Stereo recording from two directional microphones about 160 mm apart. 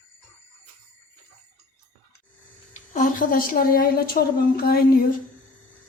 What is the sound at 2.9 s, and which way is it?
A woman's voice, 55° left (ahead or behind).